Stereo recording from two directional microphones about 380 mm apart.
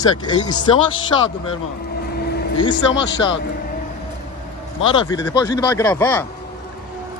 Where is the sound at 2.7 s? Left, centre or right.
Left.